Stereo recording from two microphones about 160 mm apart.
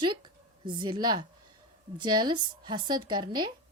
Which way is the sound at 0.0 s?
30° right (ahead or behind).